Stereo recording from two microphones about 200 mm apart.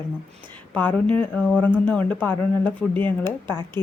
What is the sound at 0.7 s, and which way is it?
Speech, 10° left (ahead or behind).